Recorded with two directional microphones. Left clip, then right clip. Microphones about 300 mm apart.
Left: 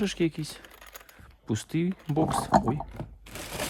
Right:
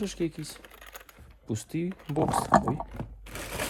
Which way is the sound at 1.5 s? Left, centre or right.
Centre.